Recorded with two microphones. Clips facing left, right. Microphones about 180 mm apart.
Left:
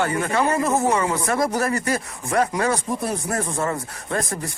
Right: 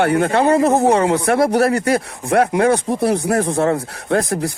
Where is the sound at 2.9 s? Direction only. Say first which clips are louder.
Right 8 dB; 75° right (ahead or behind).